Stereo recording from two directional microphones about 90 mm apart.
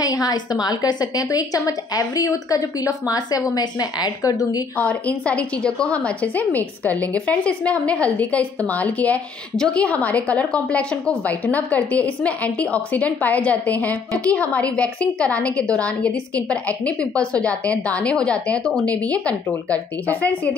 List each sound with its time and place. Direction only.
0.0 s a woman's voice: 45° left (ahead or behind)
4.7 s a woman's voice: 15° left (ahead or behind)